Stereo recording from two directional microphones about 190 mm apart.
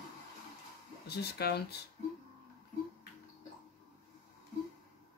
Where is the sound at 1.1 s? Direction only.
55° left (ahead or behind).